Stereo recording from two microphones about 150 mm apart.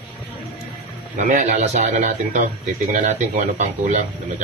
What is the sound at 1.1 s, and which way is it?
A man's voice, 55° right (ahead or behind).